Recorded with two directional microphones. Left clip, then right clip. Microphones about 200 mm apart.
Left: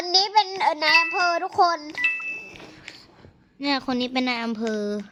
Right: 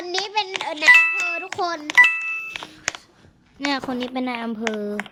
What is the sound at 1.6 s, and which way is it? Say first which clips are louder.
Speech: left 8 dB; 15° left (ahead or behind).